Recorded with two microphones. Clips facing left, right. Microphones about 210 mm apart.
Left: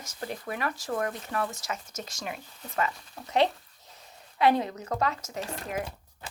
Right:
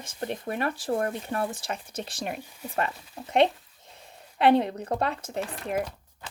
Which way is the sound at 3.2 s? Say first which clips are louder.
Right 3 dB; 25° right (ahead or behind).